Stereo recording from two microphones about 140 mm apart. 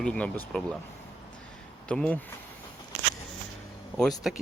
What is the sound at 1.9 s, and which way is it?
Speech, 10° left (ahead or behind).